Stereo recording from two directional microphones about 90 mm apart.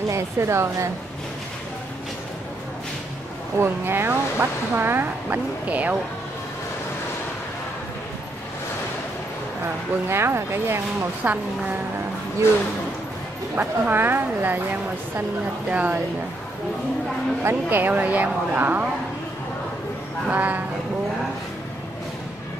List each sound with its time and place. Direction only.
0.1 s a woman's voice: 30° right (ahead or behind)
3.5 s speech: 25° right (ahead or behind)
10.0 s speech: 30° right (ahead or behind)
13.6 s speech: 20° right (ahead or behind)
17.4 s speech: 25° right (ahead or behind)
20.2 s speech: 20° right (ahead or behind)